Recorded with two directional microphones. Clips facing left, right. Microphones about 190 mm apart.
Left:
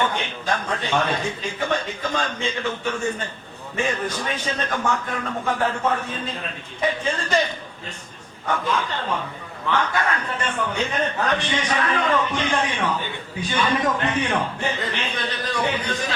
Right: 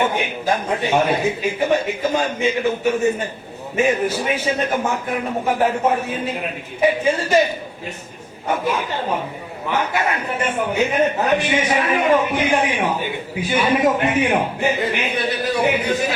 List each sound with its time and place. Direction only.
0.0 s a man's voice: 10° right (ahead or behind)
6.1 s a man's voice: 10° right (ahead or behind)
8.6 s a man's voice: 15° right (ahead or behind)